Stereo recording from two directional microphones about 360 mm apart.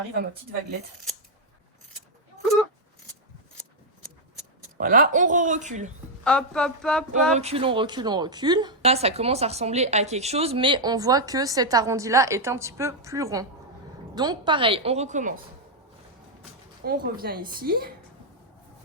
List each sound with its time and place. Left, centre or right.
4.8 s a woman's voice: right
6.2 s a sound: centre
7.3 s speech: centre
16.8 s a woman's voice: right